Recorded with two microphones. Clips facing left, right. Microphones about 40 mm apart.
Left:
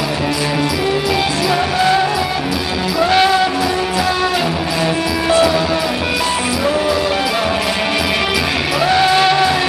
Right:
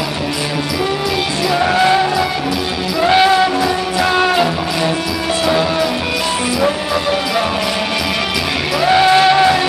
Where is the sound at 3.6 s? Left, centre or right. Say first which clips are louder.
Right 1 dB; right.